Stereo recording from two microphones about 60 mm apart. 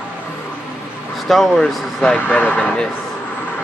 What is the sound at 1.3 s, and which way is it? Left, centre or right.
Speech, centre.